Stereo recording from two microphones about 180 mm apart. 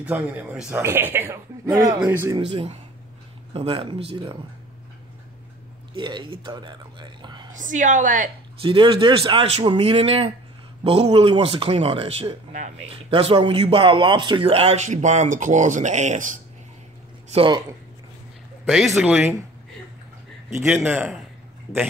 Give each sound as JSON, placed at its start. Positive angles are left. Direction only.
{"t": 0.0, "sound": "speech", "side_deg": -10}
{"t": 2.3, "sound": "speech", "side_deg": -30}
{"t": 5.9, "sound": "speech", "side_deg": -25}
{"t": 7.5, "sound": "a woman's voice", "side_deg": -45}
{"t": 8.5, "sound": "speech", "side_deg": -30}
{"t": 17.3, "sound": "speech", "side_deg": -30}
{"t": 18.9, "sound": "speech", "side_deg": -5}
{"t": 20.6, "sound": "speech", "side_deg": -10}